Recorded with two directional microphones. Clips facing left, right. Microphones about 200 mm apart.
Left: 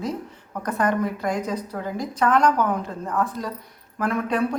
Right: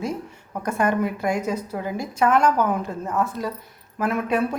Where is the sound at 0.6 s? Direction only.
10° right (ahead or behind).